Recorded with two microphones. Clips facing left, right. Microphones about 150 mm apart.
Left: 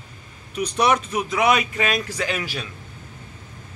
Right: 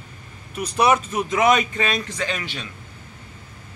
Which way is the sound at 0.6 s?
5° right (ahead or behind).